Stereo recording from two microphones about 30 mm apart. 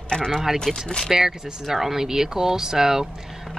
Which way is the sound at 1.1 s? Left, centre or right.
Centre.